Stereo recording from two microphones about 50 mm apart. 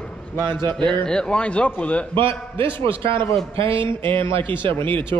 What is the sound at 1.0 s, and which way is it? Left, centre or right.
Speech, centre.